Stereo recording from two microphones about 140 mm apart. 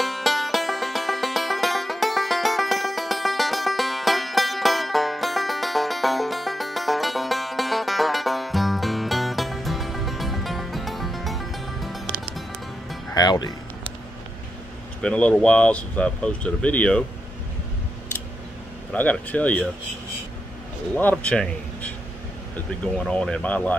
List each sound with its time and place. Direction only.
0.0 s music: centre (ahead or behind)
13.1 s music: 30° left (ahead or behind)
15.0 s speech: 5° left (ahead or behind)
18.9 s speech: 10° left (ahead or behind)
20.9 s a man's voice: 10° left (ahead or behind)
22.9 s speech: 5° left (ahead or behind)